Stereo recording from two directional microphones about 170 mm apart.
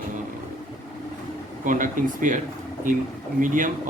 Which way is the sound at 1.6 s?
50° right (ahead or behind).